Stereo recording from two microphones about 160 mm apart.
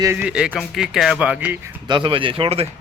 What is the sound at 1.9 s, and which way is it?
Speech, 30° right (ahead or behind).